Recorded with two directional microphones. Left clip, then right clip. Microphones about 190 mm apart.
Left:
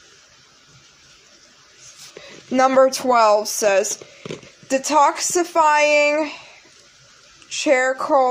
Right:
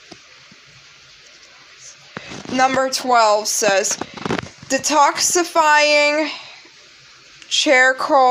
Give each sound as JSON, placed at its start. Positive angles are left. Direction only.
{"t": 2.5, "sound": "a woman's voice", "side_deg": 25}
{"t": 7.4, "sound": "a woman's voice", "side_deg": 5}